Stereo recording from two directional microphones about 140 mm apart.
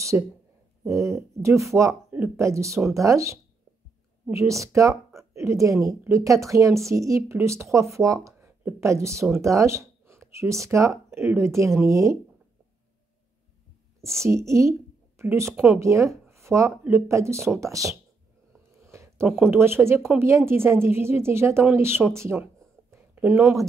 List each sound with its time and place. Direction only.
0.1 s speech: 15° right (ahead or behind)
14.2 s speech: 20° right (ahead or behind)
18.9 s a sound: 20° right (ahead or behind)
19.2 s a woman's voice: 15° right (ahead or behind)